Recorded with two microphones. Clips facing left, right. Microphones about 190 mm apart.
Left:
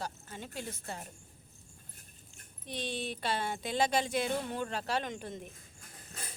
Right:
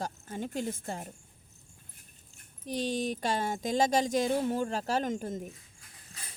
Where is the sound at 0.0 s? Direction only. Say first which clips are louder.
Right 6 dB; 50° right (ahead or behind).